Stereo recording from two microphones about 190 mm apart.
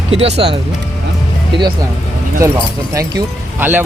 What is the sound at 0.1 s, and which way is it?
Speech, 35° right (ahead or behind).